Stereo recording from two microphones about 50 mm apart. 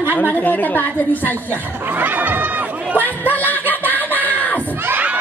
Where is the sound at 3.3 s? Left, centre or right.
Left.